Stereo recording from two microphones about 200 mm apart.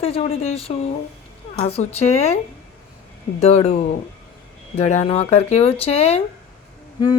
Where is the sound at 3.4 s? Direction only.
35° left (ahead or behind).